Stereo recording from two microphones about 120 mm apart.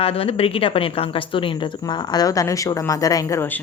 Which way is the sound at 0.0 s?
55° left (ahead or behind).